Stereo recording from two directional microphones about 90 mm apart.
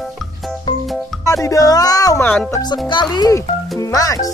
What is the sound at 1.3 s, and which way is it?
Speech, 40° left (ahead or behind).